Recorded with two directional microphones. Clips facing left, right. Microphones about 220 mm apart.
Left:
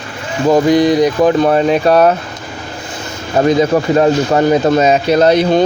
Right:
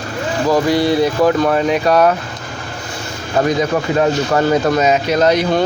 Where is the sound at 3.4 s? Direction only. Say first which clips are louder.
Left 4 dB; 25° left (ahead or behind).